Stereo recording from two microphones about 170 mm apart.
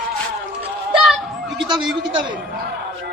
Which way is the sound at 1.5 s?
25° right (ahead or behind).